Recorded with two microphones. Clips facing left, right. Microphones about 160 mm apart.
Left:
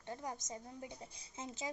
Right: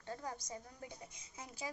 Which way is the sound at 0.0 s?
20° left (ahead or behind).